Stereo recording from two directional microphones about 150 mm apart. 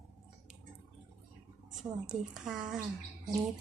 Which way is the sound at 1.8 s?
5° right (ahead or behind).